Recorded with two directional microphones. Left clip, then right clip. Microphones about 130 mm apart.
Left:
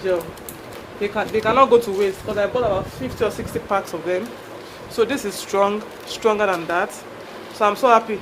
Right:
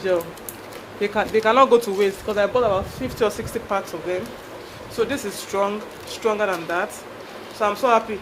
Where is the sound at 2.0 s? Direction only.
45° right (ahead or behind).